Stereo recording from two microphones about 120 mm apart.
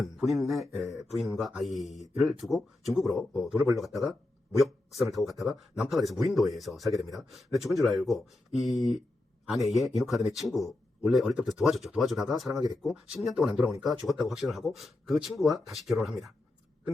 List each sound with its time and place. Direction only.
0.0 s a man's voice: centre (ahead or behind)
5.1 s a man's voice: centre (ahead or behind)